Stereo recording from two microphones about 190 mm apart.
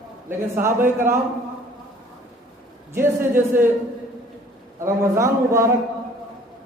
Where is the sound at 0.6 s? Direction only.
15° right (ahead or behind).